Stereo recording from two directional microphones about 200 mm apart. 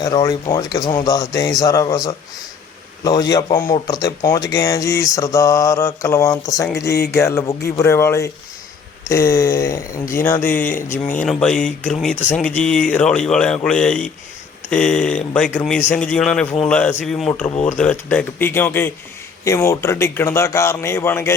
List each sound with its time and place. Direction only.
0.0 s speech: 20° left (ahead or behind)
6.8 s a sound: 55° left (ahead or behind)
7.2 s a man's voice: 10° left (ahead or behind)